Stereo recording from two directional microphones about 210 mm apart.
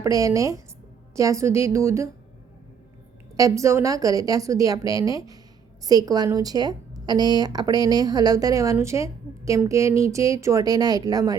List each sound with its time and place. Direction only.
0.0 s a woman's voice: 15° right (ahead or behind)
3.3 s a woman's voice: 15° right (ahead or behind)